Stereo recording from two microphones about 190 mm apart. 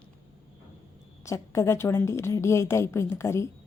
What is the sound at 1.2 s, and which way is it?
A woman's voice, 15° left (ahead or behind).